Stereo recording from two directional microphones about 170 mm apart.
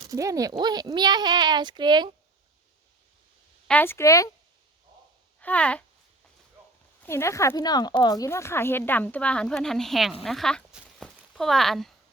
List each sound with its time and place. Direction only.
0.1 s a child's voice: 20° right (ahead or behind)
3.7 s speech: 10° left (ahead or behind)
5.4 s speech: 10° left (ahead or behind)
7.0 s speech: 15° left (ahead or behind)